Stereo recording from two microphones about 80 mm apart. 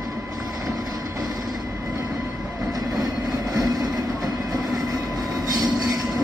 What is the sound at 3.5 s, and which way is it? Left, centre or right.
Vehicle, right.